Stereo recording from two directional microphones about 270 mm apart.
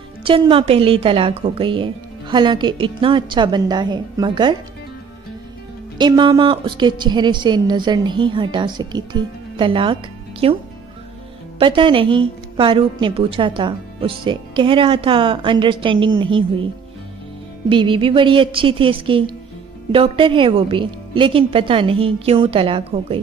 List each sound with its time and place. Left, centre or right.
0.2 s a woman's voice: centre
5.9 s a woman's voice: centre
11.6 s a woman's voice: centre
17.6 s a woman's voice: centre